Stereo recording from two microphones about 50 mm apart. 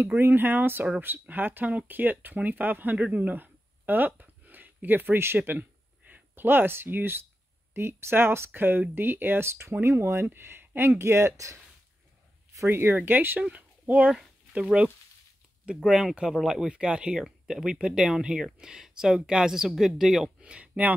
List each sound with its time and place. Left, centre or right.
0.2 s speech: right
5.5 s speech: right
9.5 s speech: right
11.0 s speech: right
12.6 s speech: right
13.4 s speech: right
15.8 s speech: centre
20.3 s speech: right